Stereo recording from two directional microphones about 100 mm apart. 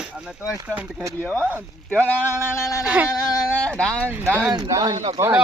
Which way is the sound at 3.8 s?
10° left (ahead or behind).